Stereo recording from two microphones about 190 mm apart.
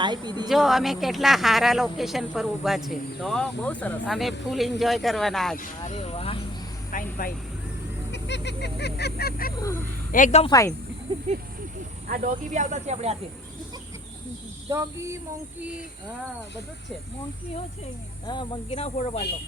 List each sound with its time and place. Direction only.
0.0 s speech: 25° right (ahead or behind)
0.4 s speech: centre (ahead or behind)
5.9 s speech: 30° left (ahead or behind)
6.9 s speech: 50° left (ahead or behind)
8.1 s a sound: 65° left (ahead or behind)
9.6 s speech: 15° left (ahead or behind)
10.1 s speech: 45° left (ahead or behind)
10.4 s speech: 20° left (ahead or behind)
12.0 s speech: 45° right (ahead or behind)
14.7 s cricket: 15° right (ahead or behind)
18.3 s speech: 25° left (ahead or behind)